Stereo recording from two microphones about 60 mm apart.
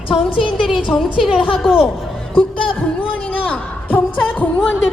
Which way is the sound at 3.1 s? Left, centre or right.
Left.